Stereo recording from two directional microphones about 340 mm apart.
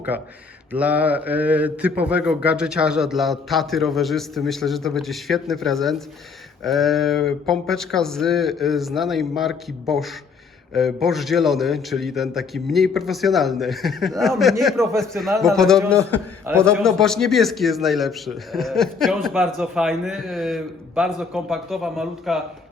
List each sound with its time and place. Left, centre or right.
0.1 s speech: centre